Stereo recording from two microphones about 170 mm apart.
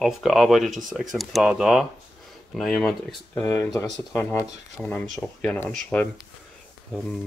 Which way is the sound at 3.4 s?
20° left (ahead or behind).